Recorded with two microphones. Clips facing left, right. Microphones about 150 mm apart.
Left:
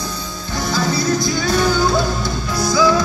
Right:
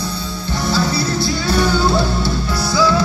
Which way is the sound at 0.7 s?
30° right (ahead or behind).